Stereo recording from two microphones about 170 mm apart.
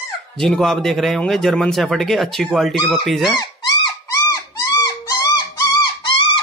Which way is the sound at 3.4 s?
20° left (ahead or behind).